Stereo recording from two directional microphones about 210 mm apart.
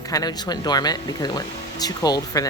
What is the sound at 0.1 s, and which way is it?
Speech, 20° left (ahead or behind).